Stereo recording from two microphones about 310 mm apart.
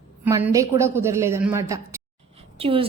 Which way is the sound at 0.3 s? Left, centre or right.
Centre.